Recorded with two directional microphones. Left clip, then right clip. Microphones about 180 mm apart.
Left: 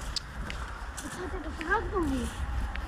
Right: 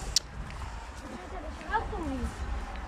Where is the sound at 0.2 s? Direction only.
35° right (ahead or behind).